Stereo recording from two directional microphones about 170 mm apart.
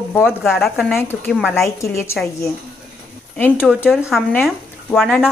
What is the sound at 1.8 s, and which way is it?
Speech, 15° left (ahead or behind).